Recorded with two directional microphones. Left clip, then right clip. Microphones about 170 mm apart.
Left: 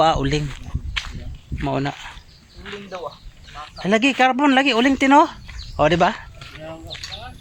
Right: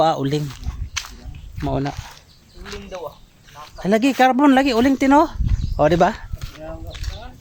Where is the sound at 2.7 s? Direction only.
Centre (ahead or behind).